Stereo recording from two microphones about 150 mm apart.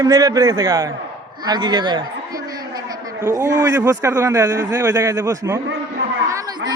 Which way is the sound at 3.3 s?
20° right (ahead or behind).